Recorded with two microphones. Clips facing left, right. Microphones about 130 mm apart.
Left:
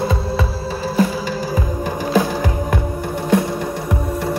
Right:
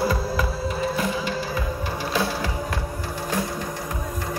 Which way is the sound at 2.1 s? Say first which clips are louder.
Left 8 dB; 50° left (ahead or behind).